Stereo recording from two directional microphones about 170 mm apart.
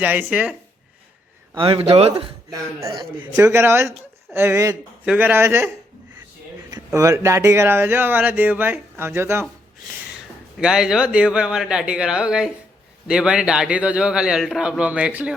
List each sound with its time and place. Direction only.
0.0 s speech: 10° right (ahead or behind)
1.5 s speech: 35° right (ahead or behind)
2.5 s a man's voice: 20° right (ahead or behind)
10.6 s a man's voice: 5° right (ahead or behind)